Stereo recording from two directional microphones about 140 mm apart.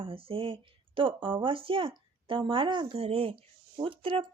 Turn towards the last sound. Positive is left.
turn(degrees=-40)  # may be behind; listen again after turning